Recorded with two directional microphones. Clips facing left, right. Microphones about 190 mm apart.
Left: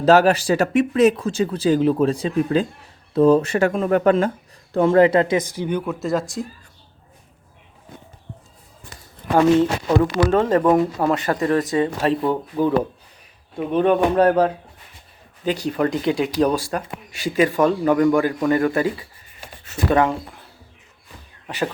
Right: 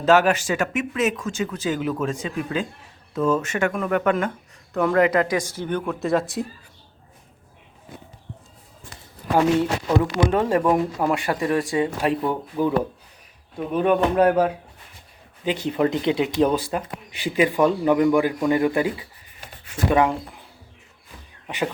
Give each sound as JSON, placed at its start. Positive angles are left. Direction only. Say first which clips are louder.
{"t": 0.0, "sound": "speech", "louder": "left 3 dB", "side_deg": 35}
{"t": 9.6, "sound": "speech", "louder": "left 3 dB", "side_deg": -15}
{"t": 13.7, "sound": "speech", "louder": "left 2 dB", "side_deg": -5}
{"t": 15.6, "sound": "speech", "louder": "even", "side_deg": -20}
{"t": 21.4, "sound": "a sound", "louder": "left 1 dB", "side_deg": -15}